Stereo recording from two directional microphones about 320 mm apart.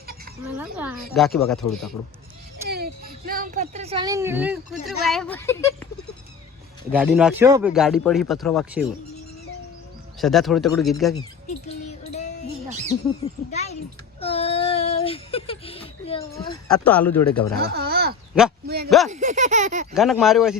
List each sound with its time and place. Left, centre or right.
0.5 s speech: centre
2.6 s speech: right; by 5.9 s centre
6.9 s speech: centre
10.2 s speech: centre
11.9 s music: left
13.5 s a child's voice: left
14.2 s a sound: centre
16.6 s speech: centre
17.6 s a sound: right
18.9 s speech: centre
19.1 s a sound: right
19.9 s speech: centre